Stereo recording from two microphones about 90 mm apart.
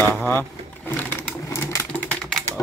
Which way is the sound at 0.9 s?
20° left (ahead or behind).